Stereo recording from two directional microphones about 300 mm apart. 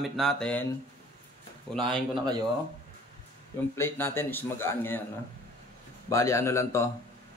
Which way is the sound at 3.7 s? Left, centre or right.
Centre.